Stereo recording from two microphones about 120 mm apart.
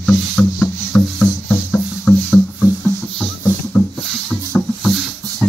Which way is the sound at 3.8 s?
20° left (ahead or behind).